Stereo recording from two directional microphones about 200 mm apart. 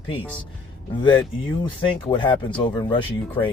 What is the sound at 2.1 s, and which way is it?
Speech, 25° left (ahead or behind).